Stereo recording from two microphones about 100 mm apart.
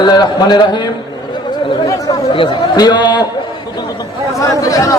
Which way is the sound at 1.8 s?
35° left (ahead or behind).